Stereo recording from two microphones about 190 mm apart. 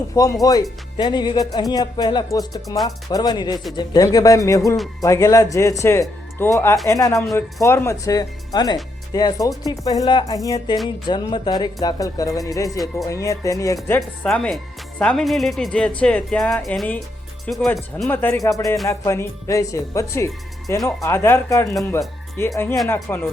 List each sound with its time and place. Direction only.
0.1 s speech: 15° left (ahead or behind)